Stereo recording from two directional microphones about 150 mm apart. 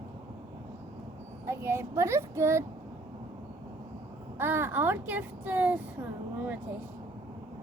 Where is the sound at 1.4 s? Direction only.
15° right (ahead or behind).